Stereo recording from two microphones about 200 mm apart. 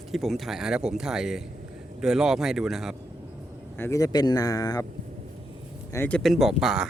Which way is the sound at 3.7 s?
15° left (ahead or behind).